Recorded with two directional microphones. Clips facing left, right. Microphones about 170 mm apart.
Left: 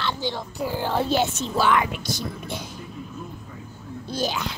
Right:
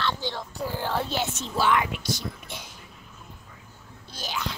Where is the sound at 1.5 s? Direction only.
55° left (ahead or behind).